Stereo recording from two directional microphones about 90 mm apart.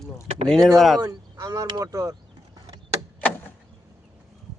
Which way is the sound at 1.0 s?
40° right (ahead or behind).